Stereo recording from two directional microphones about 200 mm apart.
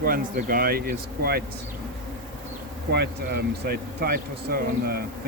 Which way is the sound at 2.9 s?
55° right (ahead or behind).